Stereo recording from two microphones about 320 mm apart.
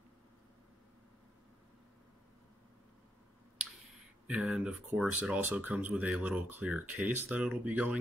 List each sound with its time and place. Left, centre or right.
4.3 s speech: centre